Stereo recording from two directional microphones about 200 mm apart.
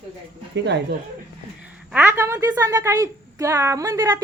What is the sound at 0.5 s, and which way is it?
Speech, 60° right (ahead or behind).